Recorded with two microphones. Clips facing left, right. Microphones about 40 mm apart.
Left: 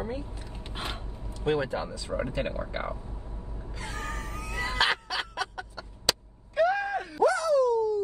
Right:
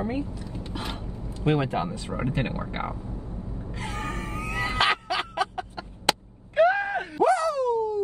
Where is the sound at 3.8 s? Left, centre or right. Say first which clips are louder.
Right 3 dB; right.